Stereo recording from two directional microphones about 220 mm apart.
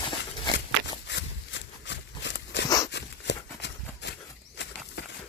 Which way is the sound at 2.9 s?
55° left (ahead or behind).